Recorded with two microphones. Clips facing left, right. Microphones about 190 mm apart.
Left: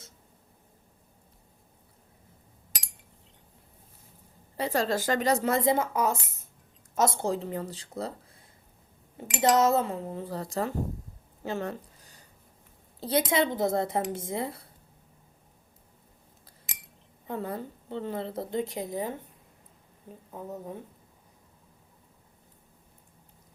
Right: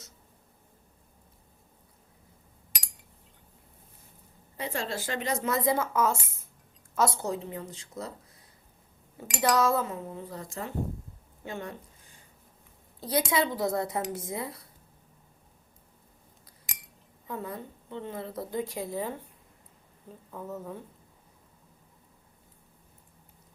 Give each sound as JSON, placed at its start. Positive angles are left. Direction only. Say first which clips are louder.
{"t": 4.5, "sound": "speech", "louder": "left 6 dB", "side_deg": 35}
{"t": 5.5, "sound": "a woman's voice", "louder": "left 1 dB", "side_deg": 25}
{"t": 9.3, "sound": "speech", "louder": "left 3 dB", "side_deg": 20}
{"t": 11.4, "sound": "a sound", "louder": "left 5 dB", "side_deg": 35}
{"t": 13.0, "sound": "a woman's voice", "louder": "left 2 dB", "side_deg": 25}
{"t": 17.2, "sound": "a woman's voice", "louder": "left 3 dB", "side_deg": 30}
{"t": 20.3, "sound": "speech", "louder": "even", "side_deg": 20}